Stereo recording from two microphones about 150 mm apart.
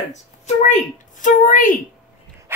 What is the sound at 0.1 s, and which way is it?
Speech, 55° left (ahead or behind).